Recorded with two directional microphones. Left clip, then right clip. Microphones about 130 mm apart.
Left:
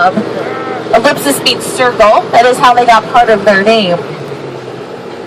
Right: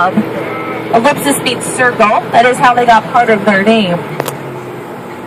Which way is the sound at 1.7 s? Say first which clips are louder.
Left 2 dB; 60° left (ahead or behind).